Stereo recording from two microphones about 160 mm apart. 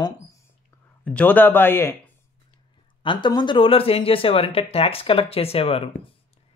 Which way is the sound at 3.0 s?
30° left (ahead or behind).